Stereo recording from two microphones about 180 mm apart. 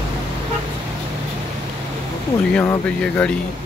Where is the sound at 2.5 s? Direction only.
10° left (ahead or behind).